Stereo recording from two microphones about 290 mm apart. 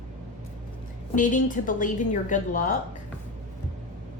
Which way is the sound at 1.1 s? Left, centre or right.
Left.